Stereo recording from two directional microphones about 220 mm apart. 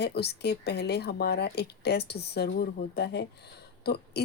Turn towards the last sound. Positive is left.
turn(degrees=50)  # may be behind; listen again after turning